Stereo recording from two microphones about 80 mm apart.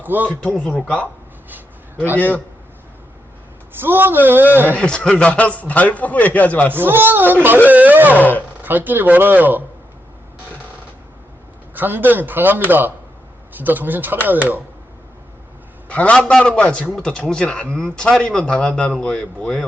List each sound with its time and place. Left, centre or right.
0.0 s a man's voice: right
0.3 s a man's voice: centre
2.1 s speech: left
3.8 s a man's voice: right
4.8 s a man's voice: centre
6.7 s a man's voice: right
8.2 s speech: left
8.6 s a man's voice: right
11.7 s a man's voice: right
15.9 s a man's voice: centre